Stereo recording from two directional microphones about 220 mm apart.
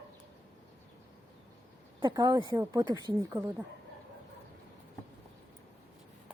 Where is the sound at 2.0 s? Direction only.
20° right (ahead or behind).